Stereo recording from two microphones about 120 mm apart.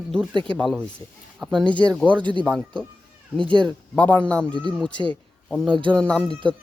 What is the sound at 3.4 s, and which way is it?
Speech, 45° right (ahead or behind).